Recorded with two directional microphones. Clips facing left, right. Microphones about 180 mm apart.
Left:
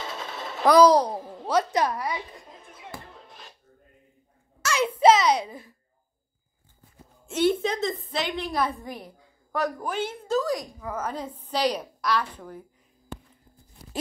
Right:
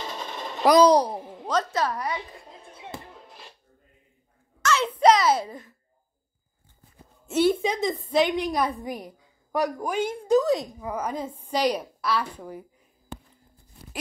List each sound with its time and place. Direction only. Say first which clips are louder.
0.7 s a woman's voice: even; 20° right (ahead or behind)
1.5 s a woman's voice: left 2 dB; 15° left (ahead or behind)
2.7 s music: right 3 dB; 25° right (ahead or behind)
4.6 s a sound: right 1 dB; 10° left (ahead or behind)
5.4 s a woman's voice: right 1 dB; 5° left (ahead or behind)
7.2 s a woman's voice: right 1 dB; 5° right (ahead or behind)